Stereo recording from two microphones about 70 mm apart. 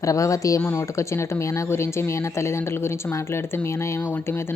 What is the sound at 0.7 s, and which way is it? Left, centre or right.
Speech, left.